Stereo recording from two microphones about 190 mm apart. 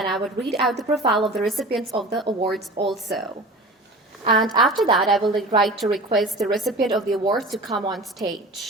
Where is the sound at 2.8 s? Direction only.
Centre (ahead or behind).